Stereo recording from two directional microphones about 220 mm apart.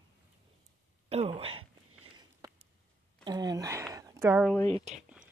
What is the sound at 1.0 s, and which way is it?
Speech, 30° right (ahead or behind).